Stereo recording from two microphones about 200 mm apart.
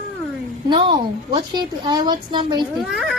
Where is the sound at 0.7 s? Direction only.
25° right (ahead or behind).